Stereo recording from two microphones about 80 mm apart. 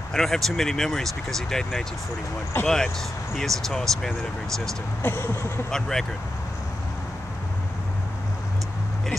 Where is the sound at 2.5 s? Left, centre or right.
Left.